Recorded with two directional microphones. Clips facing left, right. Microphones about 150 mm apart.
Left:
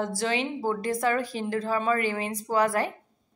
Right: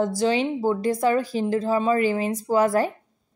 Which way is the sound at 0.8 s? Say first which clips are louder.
Right 4 dB; 30° right (ahead or behind).